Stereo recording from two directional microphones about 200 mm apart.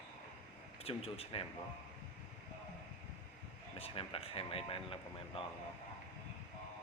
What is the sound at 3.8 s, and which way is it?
Speech, 30° left (ahead or behind).